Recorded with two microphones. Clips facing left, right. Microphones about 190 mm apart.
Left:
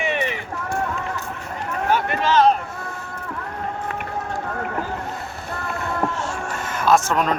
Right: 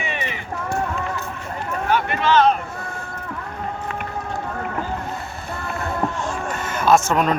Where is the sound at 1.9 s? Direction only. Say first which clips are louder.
Right 1 dB; 40° left (ahead or behind).